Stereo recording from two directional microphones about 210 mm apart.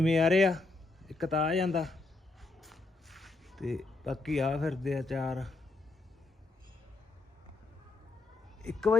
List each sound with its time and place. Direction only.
0.0 s speech: centre (ahead or behind)
2.4 s a sound: centre (ahead or behind)
8.6 s speech: centre (ahead or behind)